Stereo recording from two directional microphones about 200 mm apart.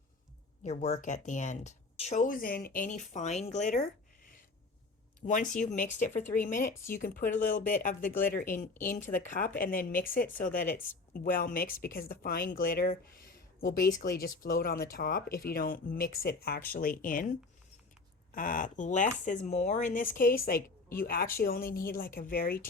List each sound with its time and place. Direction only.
0.6 s speech: 35° left (ahead or behind)
5.2 s speech: 40° left (ahead or behind)
8.1 s a woman's voice: 10° left (ahead or behind)
9.0 s a woman's voice: 40° left (ahead or behind)
18.3 s a woman's voice: 45° left (ahead or behind)